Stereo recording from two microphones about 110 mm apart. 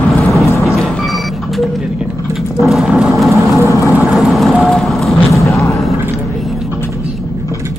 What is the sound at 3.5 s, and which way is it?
Vehicle, 25° right (ahead or behind).